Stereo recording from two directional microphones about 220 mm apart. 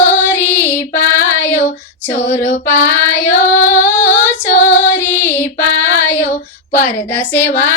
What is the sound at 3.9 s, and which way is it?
Female singing, 10° left (ahead or behind).